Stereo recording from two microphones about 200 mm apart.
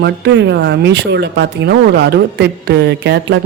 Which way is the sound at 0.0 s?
60° right (ahead or behind).